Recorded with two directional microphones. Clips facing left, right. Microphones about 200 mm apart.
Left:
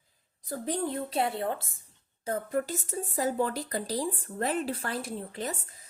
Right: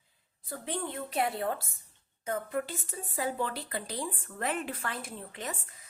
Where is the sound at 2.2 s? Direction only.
35° left (ahead or behind).